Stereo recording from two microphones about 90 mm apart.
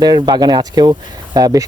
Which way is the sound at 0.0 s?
50° right (ahead or behind).